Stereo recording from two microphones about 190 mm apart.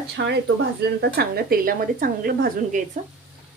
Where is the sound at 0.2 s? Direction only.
60° right (ahead or behind).